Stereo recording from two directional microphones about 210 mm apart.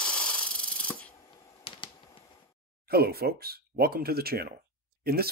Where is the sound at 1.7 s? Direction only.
25° left (ahead or behind).